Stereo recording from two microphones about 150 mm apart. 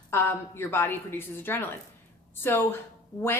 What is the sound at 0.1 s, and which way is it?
A woman's voice, 15° left (ahead or behind).